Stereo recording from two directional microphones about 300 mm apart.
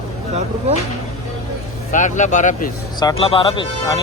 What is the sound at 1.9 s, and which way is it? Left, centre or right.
Speech, left.